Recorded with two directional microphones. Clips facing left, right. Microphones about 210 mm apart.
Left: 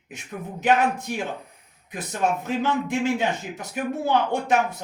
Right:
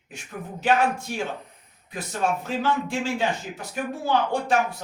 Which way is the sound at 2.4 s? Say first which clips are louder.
Left 1 dB; 20° left (ahead or behind).